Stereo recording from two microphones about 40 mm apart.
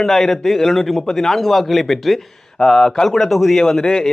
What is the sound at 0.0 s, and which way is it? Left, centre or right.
A man's voice, centre.